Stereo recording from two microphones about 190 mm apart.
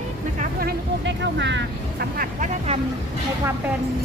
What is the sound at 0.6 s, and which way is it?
Speech, 70° right (ahead or behind).